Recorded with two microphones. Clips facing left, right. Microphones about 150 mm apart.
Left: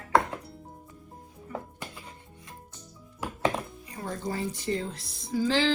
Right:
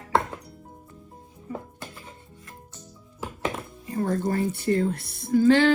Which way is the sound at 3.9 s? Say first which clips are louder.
Right 9 dB; 50° right (ahead or behind).